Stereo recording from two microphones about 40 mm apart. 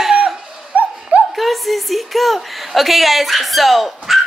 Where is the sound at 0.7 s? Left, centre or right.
Right.